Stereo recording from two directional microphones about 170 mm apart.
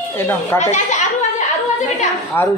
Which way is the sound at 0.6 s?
45° left (ahead or behind).